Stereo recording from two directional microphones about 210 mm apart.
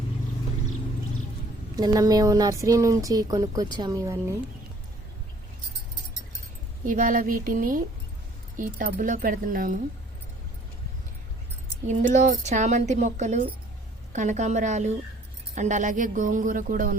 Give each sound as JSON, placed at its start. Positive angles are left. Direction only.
{"t": 1.7, "sound": "speech", "side_deg": -20}
{"t": 6.8, "sound": "speech", "side_deg": -40}
{"t": 11.9, "sound": "speech", "side_deg": -35}